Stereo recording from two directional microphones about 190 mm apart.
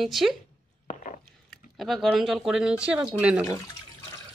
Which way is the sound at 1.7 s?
Centre (ahead or behind).